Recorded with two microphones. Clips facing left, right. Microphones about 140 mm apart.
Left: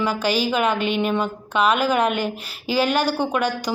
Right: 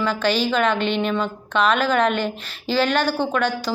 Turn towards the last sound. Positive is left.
turn(degrees=10)  # may be behind; listen again after turning